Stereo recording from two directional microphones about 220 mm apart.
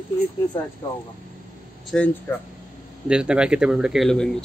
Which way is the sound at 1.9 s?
5° left (ahead or behind).